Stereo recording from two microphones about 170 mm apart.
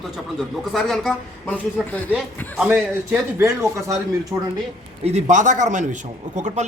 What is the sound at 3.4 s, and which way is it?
Speech, 20° right (ahead or behind).